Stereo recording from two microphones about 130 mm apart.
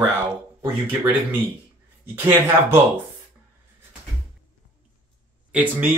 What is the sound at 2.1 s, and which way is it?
Speech, 15° right (ahead or behind).